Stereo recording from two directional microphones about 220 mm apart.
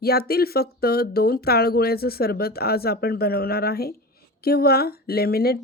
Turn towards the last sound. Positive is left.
turn(degrees=45)  # may be behind; listen again after turning